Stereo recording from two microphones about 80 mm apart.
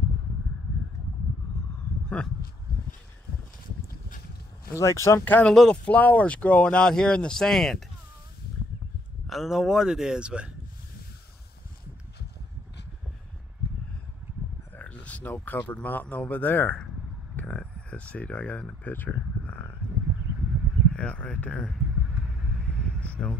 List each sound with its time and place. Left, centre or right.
2.0 s speech: centre
4.6 s speech: left
5.2 s a man's voice: left
5.5 s speech: centre
9.3 s speech: centre
14.8 s a sound: centre
15.3 s a man's voice: left
17.4 s a sound: centre
20.9 s speech: centre
22.6 s vehicle: centre
23.0 s a sound: centre